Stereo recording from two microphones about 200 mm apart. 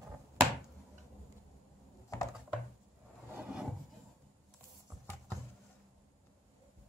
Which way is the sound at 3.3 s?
5° right (ahead or behind).